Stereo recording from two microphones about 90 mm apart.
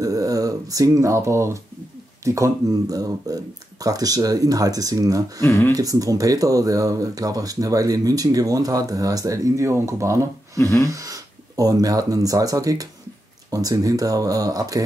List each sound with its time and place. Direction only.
0.0 s speech: 40° right (ahead or behind)
5.4 s speech: 25° left (ahead or behind)
5.8 s speech: 40° right (ahead or behind)
10.6 s a sound: 35° left (ahead or behind)
11.0 s speech: 40° right (ahead or behind)